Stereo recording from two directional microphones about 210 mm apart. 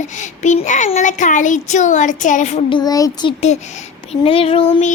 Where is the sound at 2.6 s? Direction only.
20° left (ahead or behind).